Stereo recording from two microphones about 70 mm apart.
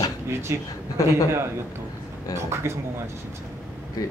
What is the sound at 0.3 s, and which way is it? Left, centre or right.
Speech, right.